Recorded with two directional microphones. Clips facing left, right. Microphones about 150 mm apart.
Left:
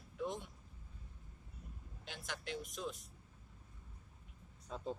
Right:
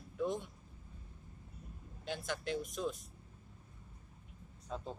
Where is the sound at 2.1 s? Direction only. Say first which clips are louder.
Right 7 dB; 40° right (ahead or behind).